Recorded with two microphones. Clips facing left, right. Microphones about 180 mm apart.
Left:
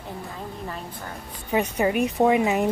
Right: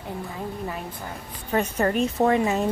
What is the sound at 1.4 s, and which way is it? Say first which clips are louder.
A woman's voice: left 1 dB; 10° left (ahead or behind).